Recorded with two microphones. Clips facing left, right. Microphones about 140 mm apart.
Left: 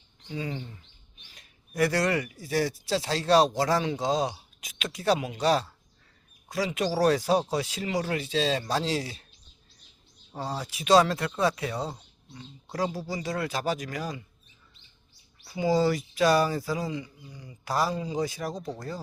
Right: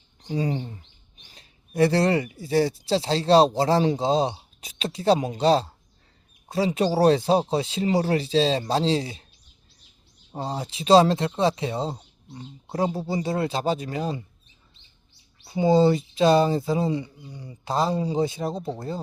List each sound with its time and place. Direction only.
0.2 s speech: 35° right (ahead or behind)
10.3 s speech: 25° right (ahead or behind)
15.4 s speech: 30° right (ahead or behind)